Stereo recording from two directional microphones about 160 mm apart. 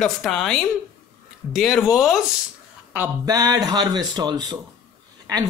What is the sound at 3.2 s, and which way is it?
Speech, 25° right (ahead or behind).